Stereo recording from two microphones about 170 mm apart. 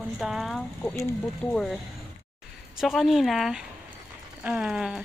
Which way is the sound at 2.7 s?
Centre (ahead or behind).